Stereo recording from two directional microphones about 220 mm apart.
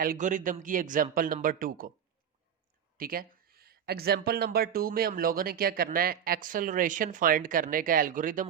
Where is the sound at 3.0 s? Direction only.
40° right (ahead or behind).